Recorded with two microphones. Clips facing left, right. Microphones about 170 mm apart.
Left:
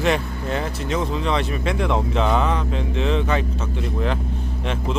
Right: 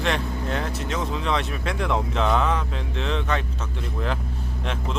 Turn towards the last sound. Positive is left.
turn(degrees=5)  # may be behind; listen again after turning